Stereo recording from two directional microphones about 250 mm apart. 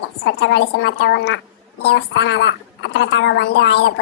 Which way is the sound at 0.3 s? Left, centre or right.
Left.